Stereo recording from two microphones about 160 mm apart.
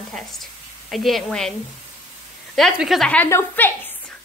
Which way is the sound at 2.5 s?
Centre (ahead or behind).